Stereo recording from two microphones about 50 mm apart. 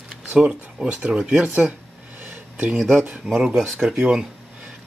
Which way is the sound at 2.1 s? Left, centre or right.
Right.